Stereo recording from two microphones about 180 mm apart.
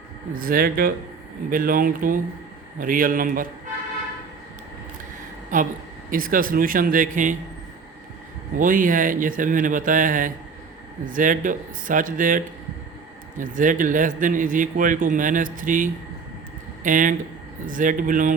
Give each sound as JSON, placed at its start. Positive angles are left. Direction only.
{"t": 0.3, "sound": "a man's voice", "side_deg": -55}
{"t": 5.5, "sound": "a man's voice", "side_deg": -45}
{"t": 8.5, "sound": "a man's voice", "side_deg": -50}
{"t": 13.4, "sound": "a man's voice", "side_deg": -45}